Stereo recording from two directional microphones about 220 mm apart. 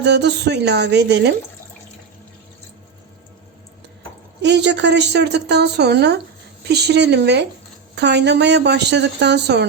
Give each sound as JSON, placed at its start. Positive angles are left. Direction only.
{"t": 0.0, "sound": "a woman's voice", "side_deg": -50}
{"t": 4.4, "sound": "a woman's voice", "side_deg": -50}